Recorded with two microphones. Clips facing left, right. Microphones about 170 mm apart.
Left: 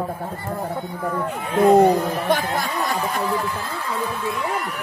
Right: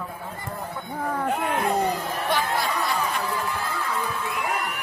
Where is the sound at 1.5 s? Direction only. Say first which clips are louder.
Left 15 dB; 55° left (ahead or behind).